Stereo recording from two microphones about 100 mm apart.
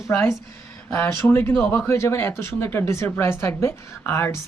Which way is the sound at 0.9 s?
25° left (ahead or behind).